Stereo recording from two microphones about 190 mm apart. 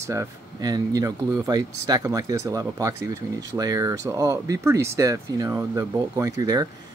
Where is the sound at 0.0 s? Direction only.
15° right (ahead or behind).